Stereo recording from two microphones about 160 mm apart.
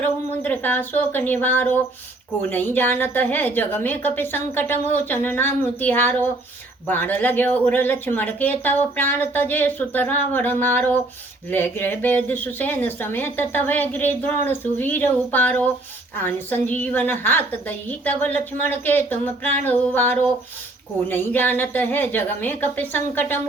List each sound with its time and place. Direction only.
0.0 s speech: 10° left (ahead or behind)